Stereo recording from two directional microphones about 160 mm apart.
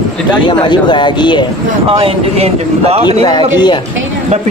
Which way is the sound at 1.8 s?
35° right (ahead or behind).